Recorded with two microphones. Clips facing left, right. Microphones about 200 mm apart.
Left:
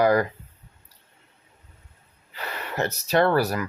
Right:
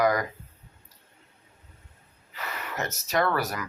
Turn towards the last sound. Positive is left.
turn(degrees=30)  # may be behind; listen again after turning